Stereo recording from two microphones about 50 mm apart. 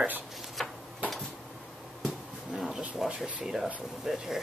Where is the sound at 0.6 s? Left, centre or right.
Centre.